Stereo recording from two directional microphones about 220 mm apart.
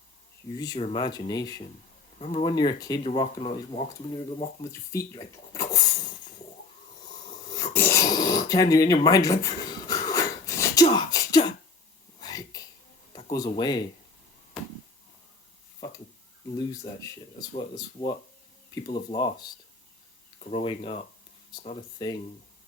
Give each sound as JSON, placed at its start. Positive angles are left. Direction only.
{"t": 0.5, "sound": "speech", "side_deg": 15}
{"t": 2.1, "sound": "speech", "side_deg": 30}
{"t": 4.9, "sound": "speech", "side_deg": 15}
{"t": 7.5, "sound": "a sound", "side_deg": 15}
{"t": 13.1, "sound": "speech", "side_deg": 20}
{"t": 14.5, "sound": "a sound", "side_deg": -5}
{"t": 16.6, "sound": "speech", "side_deg": 20}